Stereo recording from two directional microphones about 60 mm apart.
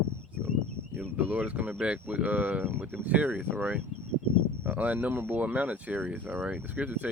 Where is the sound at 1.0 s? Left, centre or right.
Right.